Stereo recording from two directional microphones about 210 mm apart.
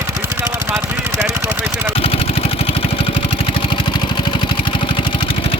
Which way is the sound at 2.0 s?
30° left (ahead or behind).